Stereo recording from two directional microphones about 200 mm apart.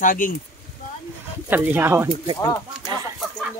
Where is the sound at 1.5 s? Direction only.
10° right (ahead or behind).